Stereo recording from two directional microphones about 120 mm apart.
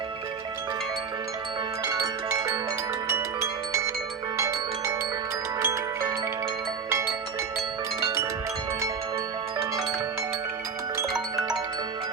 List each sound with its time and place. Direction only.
1.8 s music: 25° right (ahead or behind)
4.4 s marimba: 25° right (ahead or behind)
5.5 s music: 25° right (ahead or behind)